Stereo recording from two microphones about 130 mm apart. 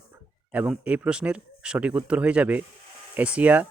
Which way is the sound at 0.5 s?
10° right (ahead or behind).